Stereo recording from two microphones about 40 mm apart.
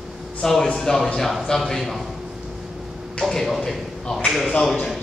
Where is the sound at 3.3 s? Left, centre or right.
Centre.